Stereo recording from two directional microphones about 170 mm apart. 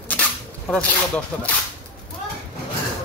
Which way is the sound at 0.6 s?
5° left (ahead or behind).